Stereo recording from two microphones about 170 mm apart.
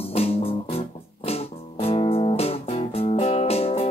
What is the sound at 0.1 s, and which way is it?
Music, 35° left (ahead or behind).